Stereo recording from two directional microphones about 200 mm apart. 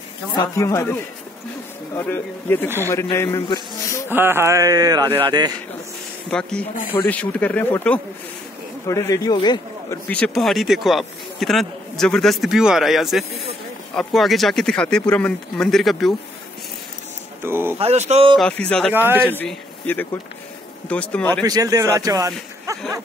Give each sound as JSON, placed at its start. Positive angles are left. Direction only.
{"t": 0.4, "sound": "speech", "side_deg": 15}
{"t": 4.1, "sound": "speech", "side_deg": -10}
{"t": 6.3, "sound": "a man's voice", "side_deg": 5}
{"t": 10.0, "sound": "speech", "side_deg": 5}
{"t": 17.4, "sound": "speech", "side_deg": -10}
{"t": 17.7, "sound": "speech", "side_deg": -30}
{"t": 18.4, "sound": "speech", "side_deg": 5}
{"t": 18.9, "sound": "speech", "side_deg": -10}
{"t": 19.3, "sound": "a man's voice", "side_deg": 10}
{"t": 21.5, "sound": "speech", "side_deg": -20}